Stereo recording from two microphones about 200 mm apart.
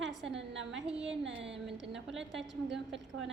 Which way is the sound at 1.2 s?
65° right (ahead or behind).